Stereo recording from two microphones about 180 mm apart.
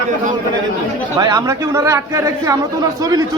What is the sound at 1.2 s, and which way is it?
A man's voice, 20° right (ahead or behind).